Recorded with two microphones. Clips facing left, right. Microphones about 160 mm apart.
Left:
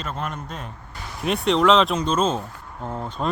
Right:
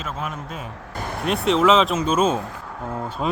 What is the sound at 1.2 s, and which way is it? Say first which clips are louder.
Speech: even; centre (ahead or behind).